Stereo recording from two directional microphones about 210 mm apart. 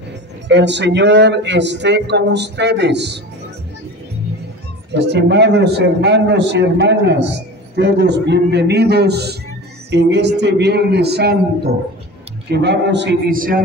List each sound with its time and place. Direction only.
0.5 s a man's voice: 55° right (ahead or behind)
4.9 s a man's voice: 55° right (ahead or behind)